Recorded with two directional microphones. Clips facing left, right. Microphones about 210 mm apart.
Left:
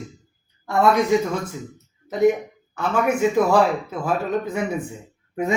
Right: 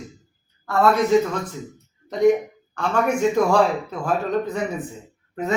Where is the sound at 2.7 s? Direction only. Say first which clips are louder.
Even; 5° left (ahead or behind).